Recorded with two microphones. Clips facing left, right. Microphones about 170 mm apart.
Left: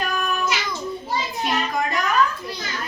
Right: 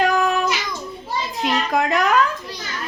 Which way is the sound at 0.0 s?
90° right.